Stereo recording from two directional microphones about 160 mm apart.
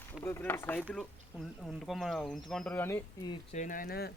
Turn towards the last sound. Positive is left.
turn(degrees=75)  # may be behind; listen again after turning